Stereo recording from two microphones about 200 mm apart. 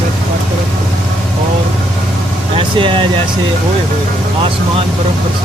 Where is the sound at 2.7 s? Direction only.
25° right (ahead or behind).